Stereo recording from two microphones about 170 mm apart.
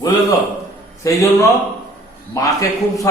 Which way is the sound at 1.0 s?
20° left (ahead or behind).